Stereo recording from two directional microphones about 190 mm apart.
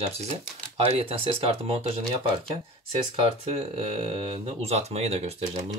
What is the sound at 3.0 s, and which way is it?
Speech, 30° right (ahead or behind).